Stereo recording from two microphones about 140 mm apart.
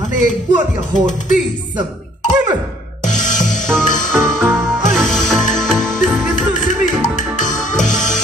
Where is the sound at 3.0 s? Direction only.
60° left (ahead or behind).